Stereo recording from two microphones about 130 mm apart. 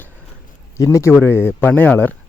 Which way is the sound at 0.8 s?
20° left (ahead or behind).